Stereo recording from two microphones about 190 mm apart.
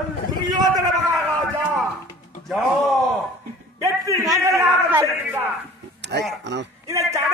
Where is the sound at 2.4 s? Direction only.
Centre (ahead or behind).